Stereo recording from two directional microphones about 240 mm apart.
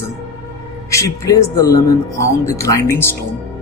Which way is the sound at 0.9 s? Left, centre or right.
Centre.